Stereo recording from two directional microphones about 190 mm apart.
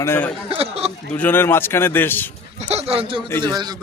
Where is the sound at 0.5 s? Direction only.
30° right (ahead or behind).